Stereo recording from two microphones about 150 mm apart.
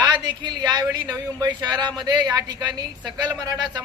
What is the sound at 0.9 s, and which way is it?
Speech, 10° right (ahead or behind).